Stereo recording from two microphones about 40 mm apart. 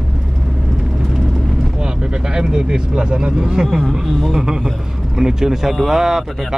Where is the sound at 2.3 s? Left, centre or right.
Centre.